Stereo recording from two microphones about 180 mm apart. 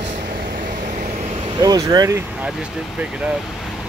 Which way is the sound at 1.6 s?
20° right (ahead or behind).